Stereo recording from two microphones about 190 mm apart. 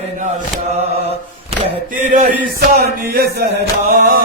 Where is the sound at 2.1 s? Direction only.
45° right (ahead or behind).